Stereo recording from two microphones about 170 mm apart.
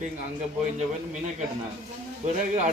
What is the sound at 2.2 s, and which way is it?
Speech, 45° right (ahead or behind).